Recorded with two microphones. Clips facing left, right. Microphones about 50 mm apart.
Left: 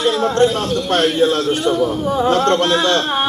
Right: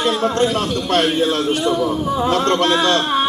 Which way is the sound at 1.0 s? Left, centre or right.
Right.